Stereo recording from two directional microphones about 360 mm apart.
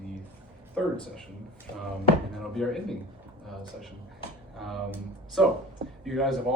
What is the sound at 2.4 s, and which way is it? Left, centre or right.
Speech, centre.